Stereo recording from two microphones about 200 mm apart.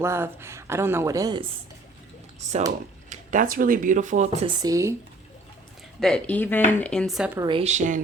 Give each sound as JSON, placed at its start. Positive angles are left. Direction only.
{"t": 0.0, "sound": "speech", "side_deg": -10}
{"t": 2.4, "sound": "a woman's voice", "side_deg": -35}
{"t": 4.4, "sound": "speech", "side_deg": -25}
{"t": 6.0, "sound": "speech", "side_deg": 5}
{"t": 7.3, "sound": "a woman's voice", "side_deg": -25}